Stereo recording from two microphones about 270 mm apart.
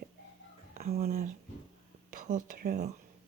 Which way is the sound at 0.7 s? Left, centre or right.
Right.